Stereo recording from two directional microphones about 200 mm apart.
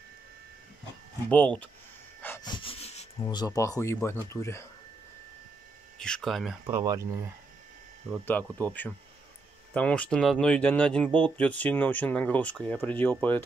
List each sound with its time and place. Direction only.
1.3 s speech: 5° left (ahead or behind)
2.2 s a sound: 10° left (ahead or behind)
2.5 s dog: 25° left (ahead or behind)
3.3 s speech: 20° left (ahead or behind)
5.9 s speech: 5° left (ahead or behind)
6.6 s speech: 15° right (ahead or behind)
8.3 s speech: 10° left (ahead or behind)